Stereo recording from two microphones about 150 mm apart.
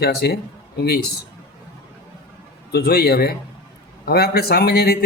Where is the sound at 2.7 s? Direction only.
90° left.